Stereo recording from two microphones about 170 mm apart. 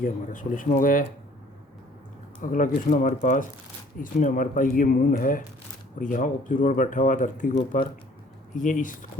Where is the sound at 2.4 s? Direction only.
50° left (ahead or behind).